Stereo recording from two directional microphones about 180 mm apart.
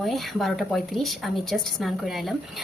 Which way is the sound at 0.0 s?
Centre (ahead or behind).